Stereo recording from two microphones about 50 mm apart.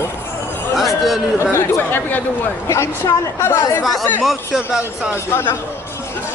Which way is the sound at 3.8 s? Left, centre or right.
Centre.